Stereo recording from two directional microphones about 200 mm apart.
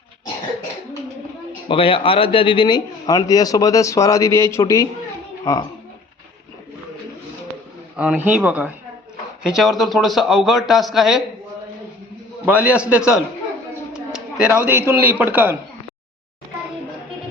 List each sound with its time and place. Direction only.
1.6 s a man's voice: 25° left (ahead or behind)
7.9 s a man's voice: 5° right (ahead or behind)
12.5 s a man's voice: 5° right (ahead or behind)